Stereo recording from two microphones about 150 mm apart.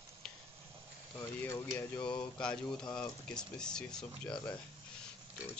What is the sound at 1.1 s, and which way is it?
Speech, 20° left (ahead or behind).